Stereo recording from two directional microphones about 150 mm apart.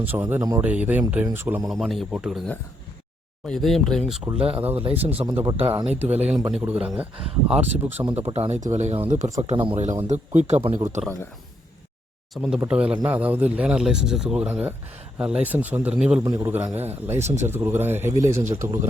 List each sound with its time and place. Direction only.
0.0 s speech: 15° right (ahead or behind)
1.7 s speech: centre (ahead or behind)
3.4 s speech: centre (ahead or behind)
4.3 s a man's voice: 35° right (ahead or behind)
6.5 s speech: 10° right (ahead or behind)
8.1 s speech: 45° right (ahead or behind)
9.4 s speech: 40° right (ahead or behind)
12.3 s speech: centre (ahead or behind)
16.2 s a man's voice: 20° right (ahead or behind)